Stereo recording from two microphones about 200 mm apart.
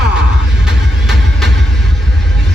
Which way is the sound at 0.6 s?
Centre (ahead or behind).